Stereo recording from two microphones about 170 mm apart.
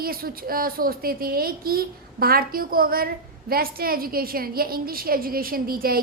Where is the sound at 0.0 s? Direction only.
60° right (ahead or behind).